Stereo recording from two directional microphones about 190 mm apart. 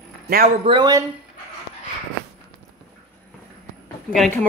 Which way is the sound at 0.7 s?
20° right (ahead or behind).